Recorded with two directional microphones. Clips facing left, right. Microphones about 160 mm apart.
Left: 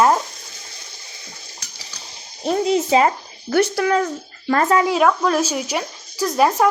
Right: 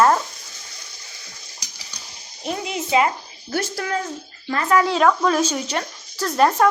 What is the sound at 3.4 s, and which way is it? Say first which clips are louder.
Speech: left 8 dB; 75° left (ahead or behind).